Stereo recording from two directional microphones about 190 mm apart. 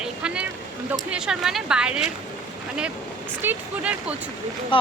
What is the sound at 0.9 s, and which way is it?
Speech, 5° right (ahead or behind).